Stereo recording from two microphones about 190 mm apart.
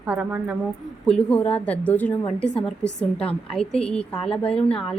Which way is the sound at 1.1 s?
5° left (ahead or behind).